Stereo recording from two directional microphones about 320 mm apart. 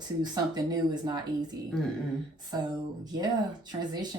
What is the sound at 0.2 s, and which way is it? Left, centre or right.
Speech, centre.